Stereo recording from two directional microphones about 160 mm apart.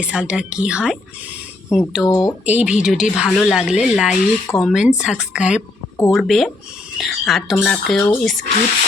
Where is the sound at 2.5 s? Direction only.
10° right (ahead or behind).